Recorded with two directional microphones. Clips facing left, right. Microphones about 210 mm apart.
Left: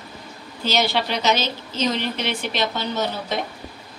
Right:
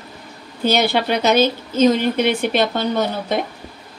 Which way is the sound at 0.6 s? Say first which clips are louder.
Right 5 dB; 55° right (ahead or behind).